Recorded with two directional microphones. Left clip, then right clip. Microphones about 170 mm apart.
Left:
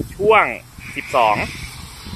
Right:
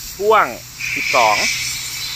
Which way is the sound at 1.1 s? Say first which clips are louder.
Right 1 dB; centre (ahead or behind).